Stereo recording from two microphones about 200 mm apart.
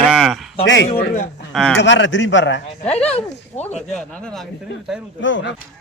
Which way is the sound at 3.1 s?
30° left (ahead or behind).